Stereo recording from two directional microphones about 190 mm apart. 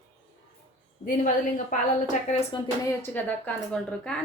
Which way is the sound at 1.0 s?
40° left (ahead or behind).